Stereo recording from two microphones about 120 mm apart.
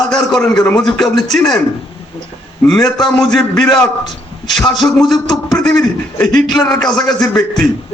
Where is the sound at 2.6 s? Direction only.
5° left (ahead or behind).